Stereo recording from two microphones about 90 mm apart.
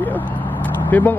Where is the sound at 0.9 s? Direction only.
20° left (ahead or behind).